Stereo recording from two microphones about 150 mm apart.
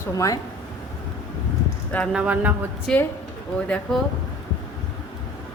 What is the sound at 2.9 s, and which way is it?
A woman's voice, 5° left (ahead or behind).